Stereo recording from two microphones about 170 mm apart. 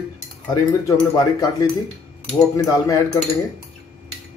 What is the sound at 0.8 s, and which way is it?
Speech, 20° left (ahead or behind).